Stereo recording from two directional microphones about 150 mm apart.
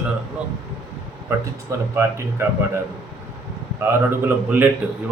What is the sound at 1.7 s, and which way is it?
Speech, 20° right (ahead or behind).